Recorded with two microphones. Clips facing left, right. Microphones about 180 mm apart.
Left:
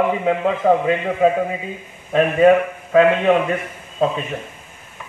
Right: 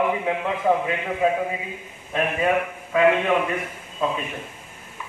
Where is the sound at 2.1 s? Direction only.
60° left (ahead or behind).